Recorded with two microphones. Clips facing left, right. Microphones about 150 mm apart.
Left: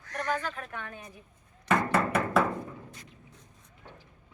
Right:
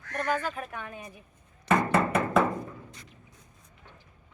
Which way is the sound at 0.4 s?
10° right (ahead or behind).